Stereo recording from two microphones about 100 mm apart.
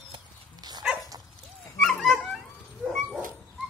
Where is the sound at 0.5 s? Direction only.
45° right (ahead or behind).